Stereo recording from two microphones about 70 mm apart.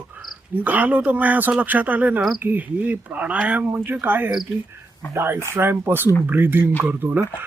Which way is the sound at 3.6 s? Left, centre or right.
Right.